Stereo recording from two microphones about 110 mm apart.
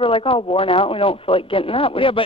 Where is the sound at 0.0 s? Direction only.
55° left (ahead or behind).